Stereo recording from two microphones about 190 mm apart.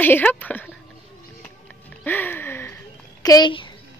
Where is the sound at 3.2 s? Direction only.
20° left (ahead or behind).